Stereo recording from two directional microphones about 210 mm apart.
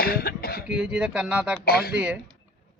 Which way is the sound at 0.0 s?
45° left (ahead or behind).